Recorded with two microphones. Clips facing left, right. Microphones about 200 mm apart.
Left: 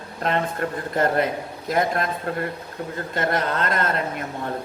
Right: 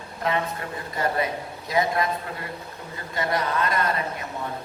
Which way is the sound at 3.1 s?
60° left (ahead or behind).